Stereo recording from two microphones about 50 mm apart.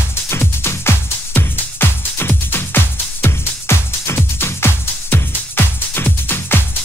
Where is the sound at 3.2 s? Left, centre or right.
Left.